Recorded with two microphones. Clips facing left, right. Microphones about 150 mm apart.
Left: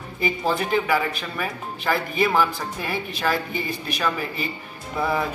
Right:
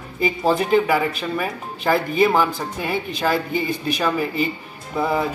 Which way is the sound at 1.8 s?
35° right (ahead or behind).